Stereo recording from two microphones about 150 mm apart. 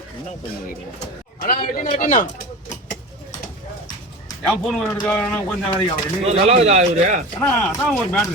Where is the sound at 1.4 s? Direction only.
75° left (ahead or behind).